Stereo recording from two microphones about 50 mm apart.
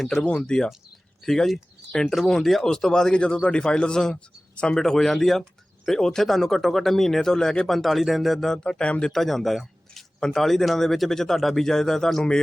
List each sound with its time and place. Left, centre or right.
0.2 s speech: left
1.2 s speech: centre
7.8 s speech: centre
8.6 s speech: left
9.1 s speech: centre